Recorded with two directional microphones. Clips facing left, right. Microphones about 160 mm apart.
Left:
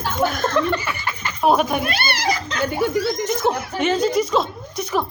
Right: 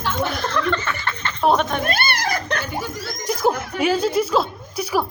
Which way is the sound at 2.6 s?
60° left (ahead or behind).